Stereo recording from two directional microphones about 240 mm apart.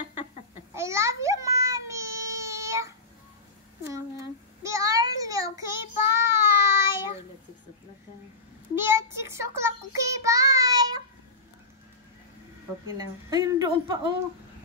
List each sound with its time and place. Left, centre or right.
0.7 s a sound: centre
4.6 s child singing: centre
8.7 s child singing: centre
12.9 s a woman's voice: centre